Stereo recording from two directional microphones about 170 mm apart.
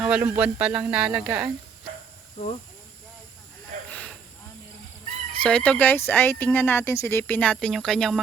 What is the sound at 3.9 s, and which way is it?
Snake, 5° left (ahead or behind).